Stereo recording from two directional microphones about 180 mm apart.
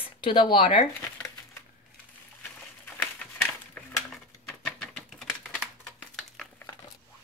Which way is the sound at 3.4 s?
5° left (ahead or behind).